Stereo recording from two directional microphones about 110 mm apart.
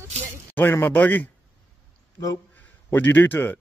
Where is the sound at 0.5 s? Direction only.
20° left (ahead or behind).